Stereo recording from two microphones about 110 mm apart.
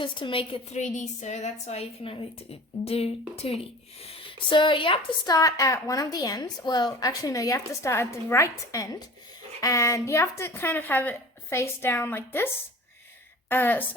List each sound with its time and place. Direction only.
0.0 s a woman's voice: 50° left (ahead or behind)
0.7 s a woman's voice: 90° left; by 5.3 s 50° left (ahead or behind)
5.3 s a woman's voice: 30° left (ahead or behind)
13.5 s a woman's voice: 15° left (ahead or behind)